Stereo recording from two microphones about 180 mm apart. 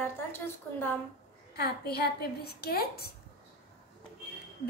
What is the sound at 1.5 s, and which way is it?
A woman's voice, 60° left (ahead or behind).